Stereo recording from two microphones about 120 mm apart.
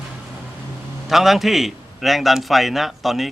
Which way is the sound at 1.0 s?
Centre (ahead or behind).